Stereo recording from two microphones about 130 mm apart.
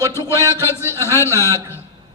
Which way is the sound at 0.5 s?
20° left (ahead or behind).